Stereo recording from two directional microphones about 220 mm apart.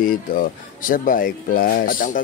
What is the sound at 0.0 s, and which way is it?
Speech, 40° left (ahead or behind).